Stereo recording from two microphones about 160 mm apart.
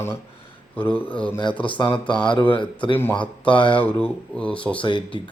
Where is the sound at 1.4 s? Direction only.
30° left (ahead or behind).